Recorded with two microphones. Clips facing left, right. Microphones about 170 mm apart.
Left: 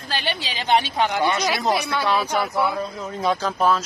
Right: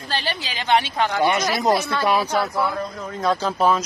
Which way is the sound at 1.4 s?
Centre (ahead or behind).